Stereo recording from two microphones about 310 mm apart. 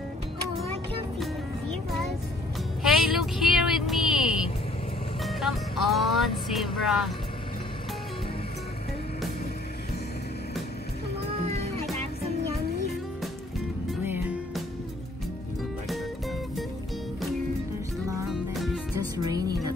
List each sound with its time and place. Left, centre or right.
2.8 s vehicle: centre
5.2 s music: centre
11.4 s music: centre
13.8 s music: centre
15.9 s music: centre
18.3 s music: centre
19.1 s music: centre